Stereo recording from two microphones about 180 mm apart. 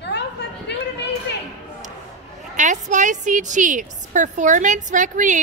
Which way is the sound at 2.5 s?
45° right (ahead or behind).